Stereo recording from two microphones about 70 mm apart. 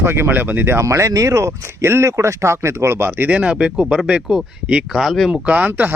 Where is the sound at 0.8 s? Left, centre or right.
Right.